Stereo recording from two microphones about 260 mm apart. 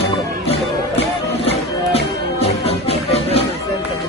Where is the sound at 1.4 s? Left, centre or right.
Left.